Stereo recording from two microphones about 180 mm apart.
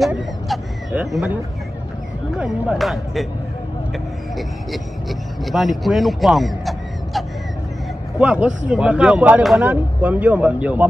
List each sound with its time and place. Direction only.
0.0 s a sound: 5° right (ahead or behind)
2.3 s speech: 5° right (ahead or behind)
5.4 s speech: centre (ahead or behind)
8.2 s speech: 5° right (ahead or behind)